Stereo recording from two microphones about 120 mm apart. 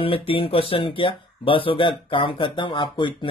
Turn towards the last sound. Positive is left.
turn(degrees=45)  # may be behind; listen again after turning